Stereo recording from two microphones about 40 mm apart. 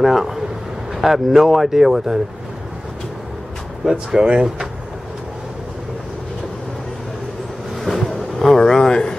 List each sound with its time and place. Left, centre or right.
0.0 s speech: centre
3.8 s speech: centre
7.8 s a sound: centre